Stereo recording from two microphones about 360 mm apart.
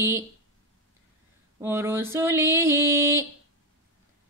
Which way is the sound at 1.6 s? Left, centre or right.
Centre.